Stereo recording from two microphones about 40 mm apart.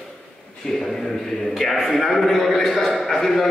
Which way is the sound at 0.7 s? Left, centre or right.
Centre.